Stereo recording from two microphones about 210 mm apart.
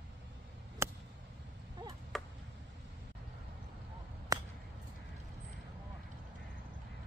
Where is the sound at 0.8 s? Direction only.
15° right (ahead or behind).